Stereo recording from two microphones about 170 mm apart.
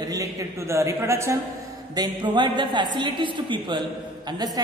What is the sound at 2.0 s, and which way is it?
A woman's voice, 25° right (ahead or behind).